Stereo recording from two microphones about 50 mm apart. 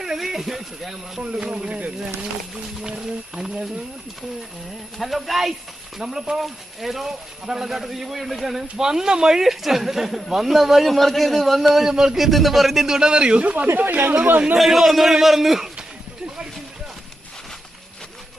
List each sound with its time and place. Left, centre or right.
0.0 s speech: centre
1.2 s speech: right
3.3 s speech: centre
4.9 s speech: centre; by 13.7 s right
13.7 s speech: right
14.6 s speech: centre